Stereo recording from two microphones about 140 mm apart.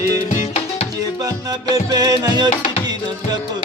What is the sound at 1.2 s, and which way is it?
Music, 25° right (ahead or behind).